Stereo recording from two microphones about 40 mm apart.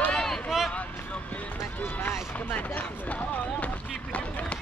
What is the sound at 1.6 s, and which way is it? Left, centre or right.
Run, left.